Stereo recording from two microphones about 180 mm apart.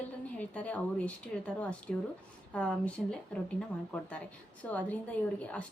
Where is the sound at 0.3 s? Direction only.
10° left (ahead or behind).